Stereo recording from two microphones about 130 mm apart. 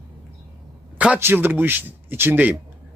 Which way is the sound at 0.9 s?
10° right (ahead or behind).